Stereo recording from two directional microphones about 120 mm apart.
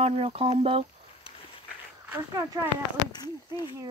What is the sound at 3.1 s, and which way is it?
Speech, 35° left (ahead or behind).